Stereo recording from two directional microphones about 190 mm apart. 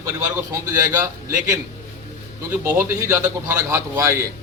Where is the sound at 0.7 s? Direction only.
15° right (ahead or behind).